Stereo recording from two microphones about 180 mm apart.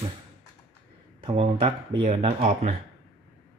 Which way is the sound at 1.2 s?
30° right (ahead or behind).